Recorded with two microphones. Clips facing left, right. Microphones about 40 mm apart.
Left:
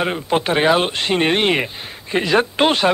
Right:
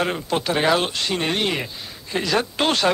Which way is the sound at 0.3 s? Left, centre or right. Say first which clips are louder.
Left 5 dB; left.